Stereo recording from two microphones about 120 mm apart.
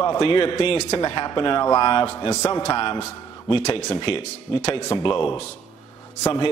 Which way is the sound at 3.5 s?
65° left (ahead or behind).